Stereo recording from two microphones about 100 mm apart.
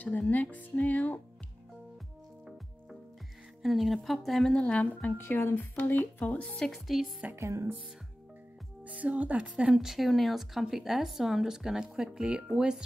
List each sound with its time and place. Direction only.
0.0 s speech: 15° left (ahead or behind)
3.6 s speech: centre (ahead or behind); by 6.7 s 15° left (ahead or behind)
6.7 s speech: centre (ahead or behind)
7.3 s speech: 30° right (ahead or behind)
8.8 s speech: 15° right (ahead or behind)